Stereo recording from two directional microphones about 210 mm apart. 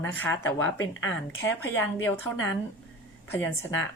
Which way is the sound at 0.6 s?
70° left (ahead or behind).